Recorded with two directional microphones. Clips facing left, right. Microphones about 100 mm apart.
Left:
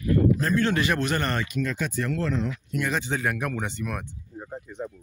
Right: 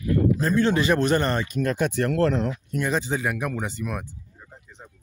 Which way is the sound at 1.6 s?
60° right (ahead or behind).